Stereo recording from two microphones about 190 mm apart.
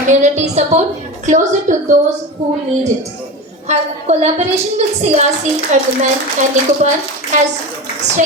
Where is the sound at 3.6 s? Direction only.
35° right (ahead or behind).